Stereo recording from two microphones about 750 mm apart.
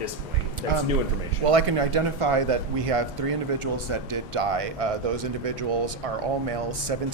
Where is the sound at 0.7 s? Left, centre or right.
Right.